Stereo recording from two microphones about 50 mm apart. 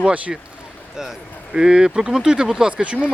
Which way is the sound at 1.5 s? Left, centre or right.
Centre.